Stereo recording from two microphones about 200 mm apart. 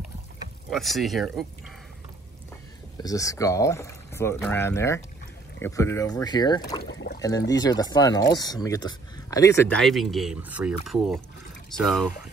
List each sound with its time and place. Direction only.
0.7 s speech: centre (ahead or behind)
3.0 s speech: 15° left (ahead or behind)
6.8 s a sound: 55° left (ahead or behind)
7.2 s speech: 20° left (ahead or behind)
9.8 s speech: centre (ahead or behind)